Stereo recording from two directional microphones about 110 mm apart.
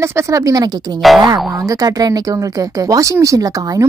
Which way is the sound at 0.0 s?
25° right (ahead or behind).